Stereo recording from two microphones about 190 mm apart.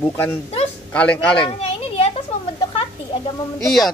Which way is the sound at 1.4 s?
30° left (ahead or behind).